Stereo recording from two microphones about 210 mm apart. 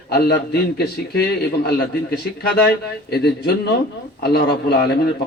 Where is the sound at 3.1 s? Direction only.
50° left (ahead or behind).